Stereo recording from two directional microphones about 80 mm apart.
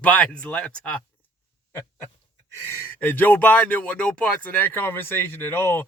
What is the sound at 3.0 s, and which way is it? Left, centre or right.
Speech, left.